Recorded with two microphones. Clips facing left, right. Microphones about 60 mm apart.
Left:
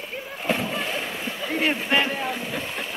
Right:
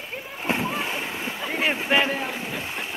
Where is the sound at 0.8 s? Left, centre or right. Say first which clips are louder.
Even; centre.